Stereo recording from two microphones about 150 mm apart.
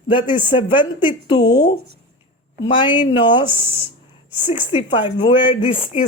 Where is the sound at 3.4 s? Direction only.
15° right (ahead or behind).